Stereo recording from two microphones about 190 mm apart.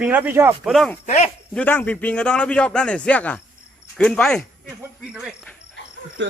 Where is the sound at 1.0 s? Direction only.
35° left (ahead or behind).